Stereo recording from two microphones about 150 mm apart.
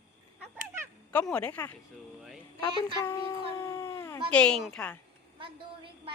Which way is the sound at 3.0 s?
20° left (ahead or behind).